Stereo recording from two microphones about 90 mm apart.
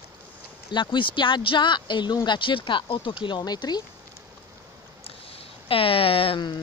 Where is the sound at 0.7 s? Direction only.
60° left (ahead or behind).